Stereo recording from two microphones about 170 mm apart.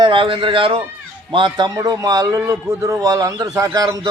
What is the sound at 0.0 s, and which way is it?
A man's voice, 30° right (ahead or behind).